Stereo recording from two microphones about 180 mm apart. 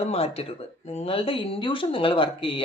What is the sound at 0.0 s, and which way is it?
Speech, 35° left (ahead or behind).